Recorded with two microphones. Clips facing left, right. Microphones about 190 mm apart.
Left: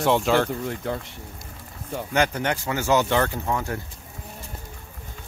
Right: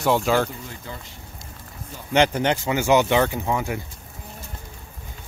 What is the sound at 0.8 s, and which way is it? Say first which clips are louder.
Speech: left 9 dB; 65° left (ahead or behind).